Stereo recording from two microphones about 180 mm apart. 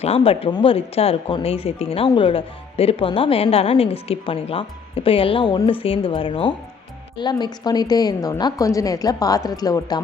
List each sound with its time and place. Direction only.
0.0 s a woman's voice: 35° left (ahead or behind)